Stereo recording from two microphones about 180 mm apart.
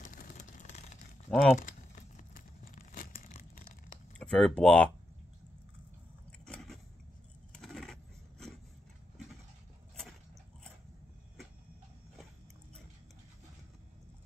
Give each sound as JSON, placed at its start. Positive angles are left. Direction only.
{"t": 0.0, "sound": "vehicle", "side_deg": 50}
{"t": 1.3, "sound": "speech", "side_deg": 0}
{"t": 1.6, "sound": "tearing", "side_deg": 45}
{"t": 4.2, "sound": "speech", "side_deg": 5}
{"t": 6.4, "sound": "a sound", "side_deg": 5}